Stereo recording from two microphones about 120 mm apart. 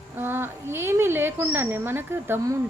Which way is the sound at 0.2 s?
20° right (ahead or behind).